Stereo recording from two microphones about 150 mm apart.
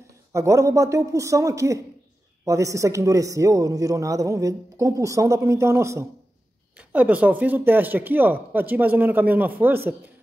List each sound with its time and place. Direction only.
0.3 s speech: 20° right (ahead or behind)